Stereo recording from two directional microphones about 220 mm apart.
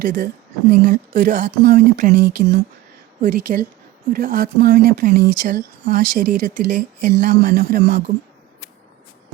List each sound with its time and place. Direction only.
0.0 s speech: 40° right (ahead or behind)